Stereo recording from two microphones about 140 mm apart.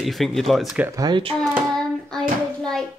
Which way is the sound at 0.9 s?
30° right (ahead or behind).